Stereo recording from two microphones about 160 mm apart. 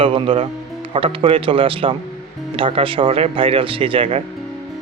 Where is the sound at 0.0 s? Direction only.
35° right (ahead or behind).